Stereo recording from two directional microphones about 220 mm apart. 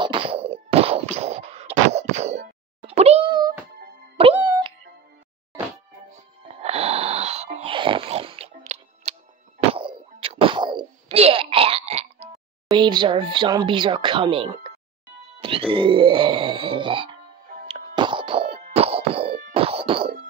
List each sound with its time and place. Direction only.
0.0 s a sound: 25° right (ahead or behind)
4.2 s music: 20° right (ahead or behind)
6.6 s snoring: 25° right (ahead or behind)
9.7 s plop: 25° right (ahead or behind)
12.7 s speech: 20° right (ahead or behind)
15.7 s speech: 25° right (ahead or behind)
17.6 s clang: 25° right (ahead or behind)
19.5 s music: 25° right (ahead or behind)